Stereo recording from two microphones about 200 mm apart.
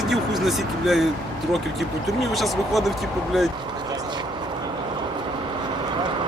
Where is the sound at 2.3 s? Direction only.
Centre (ahead or behind).